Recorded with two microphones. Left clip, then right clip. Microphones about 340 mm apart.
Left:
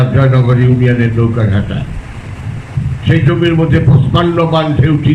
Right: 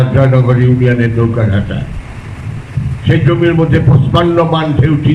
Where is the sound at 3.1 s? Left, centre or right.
Centre.